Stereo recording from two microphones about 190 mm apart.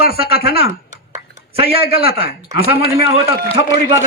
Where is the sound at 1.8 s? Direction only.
30° right (ahead or behind).